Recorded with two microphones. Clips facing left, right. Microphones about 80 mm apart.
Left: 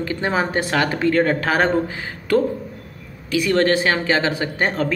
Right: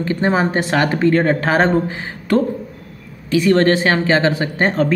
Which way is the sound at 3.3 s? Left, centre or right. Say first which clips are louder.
Right 4 dB; right.